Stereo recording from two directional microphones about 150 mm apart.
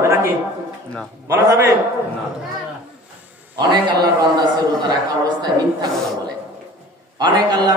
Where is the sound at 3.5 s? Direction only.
30° right (ahead or behind).